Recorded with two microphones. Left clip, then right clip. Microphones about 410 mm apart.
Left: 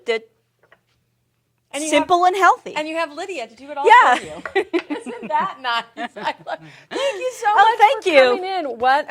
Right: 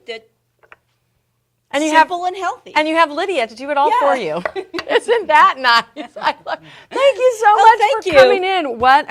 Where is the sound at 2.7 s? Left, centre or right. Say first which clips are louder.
Right 9 dB; right.